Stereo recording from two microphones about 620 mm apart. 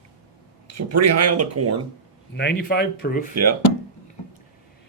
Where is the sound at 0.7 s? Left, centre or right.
Right.